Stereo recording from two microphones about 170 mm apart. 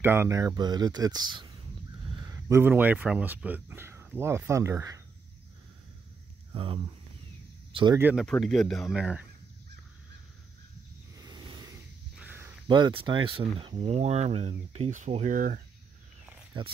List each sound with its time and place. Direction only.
0.0 s speech: 15° right (ahead or behind)
2.0 s a sound: 30° right (ahead or behind)
2.3 s speech: 15° right (ahead or behind)
6.5 s speech: 30° right (ahead or behind)
8.0 s speech: 10° right (ahead or behind)
11.1 s a sound: 25° right (ahead or behind)
12.2 s a sound: 10° right (ahead or behind)
12.6 s speech: 25° right (ahead or behind); by 15.6 s 55° right (ahead or behind)
16.5 s speech: 30° right (ahead or behind)